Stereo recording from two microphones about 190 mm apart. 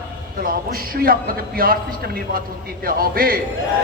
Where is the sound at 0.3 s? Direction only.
50° right (ahead or behind).